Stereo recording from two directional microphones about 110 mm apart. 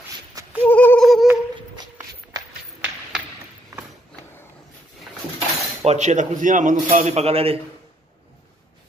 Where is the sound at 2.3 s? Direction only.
35° right (ahead or behind).